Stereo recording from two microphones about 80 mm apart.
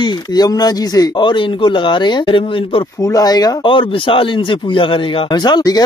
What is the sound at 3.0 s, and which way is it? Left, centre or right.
Speech, left.